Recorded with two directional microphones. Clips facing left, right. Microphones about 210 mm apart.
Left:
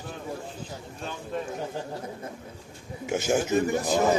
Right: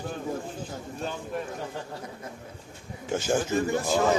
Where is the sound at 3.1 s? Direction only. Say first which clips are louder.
Left 2 dB; 10° left (ahead or behind).